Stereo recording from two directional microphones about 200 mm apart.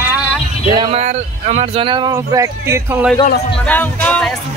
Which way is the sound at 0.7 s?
30° right (ahead or behind).